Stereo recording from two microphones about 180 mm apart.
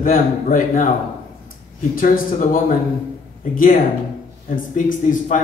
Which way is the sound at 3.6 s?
50° left (ahead or behind).